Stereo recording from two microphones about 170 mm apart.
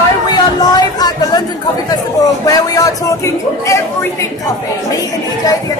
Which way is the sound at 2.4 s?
20° left (ahead or behind).